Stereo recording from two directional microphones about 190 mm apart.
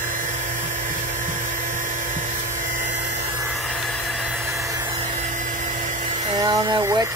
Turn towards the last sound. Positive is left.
turn(degrees=-20)  # may be behind; listen again after turning